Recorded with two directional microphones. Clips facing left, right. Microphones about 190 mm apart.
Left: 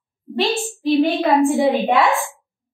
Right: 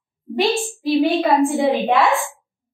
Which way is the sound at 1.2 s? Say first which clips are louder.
Left 1 dB; centre (ahead or behind).